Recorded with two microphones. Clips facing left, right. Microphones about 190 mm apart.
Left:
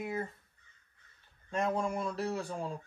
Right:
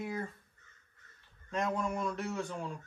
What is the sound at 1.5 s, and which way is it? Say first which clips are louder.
A man's voice: left 1 dB; 30° left (ahead or behind).